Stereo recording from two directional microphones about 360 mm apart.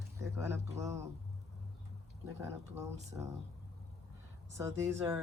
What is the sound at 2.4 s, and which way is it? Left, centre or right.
Speech, centre.